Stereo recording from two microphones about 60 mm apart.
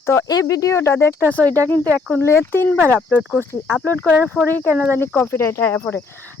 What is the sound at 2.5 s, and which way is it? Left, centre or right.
Speech, left.